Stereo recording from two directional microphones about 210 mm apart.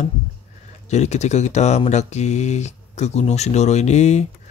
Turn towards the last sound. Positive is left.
turn(degrees=35)  # may be behind; listen again after turning